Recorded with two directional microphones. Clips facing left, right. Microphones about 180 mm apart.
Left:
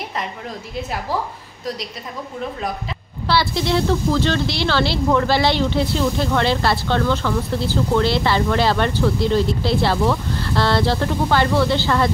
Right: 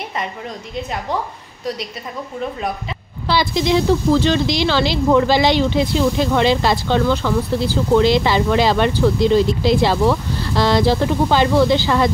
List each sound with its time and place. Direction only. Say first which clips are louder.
3.3 s speech: right 2 dB; 15° right (ahead or behind)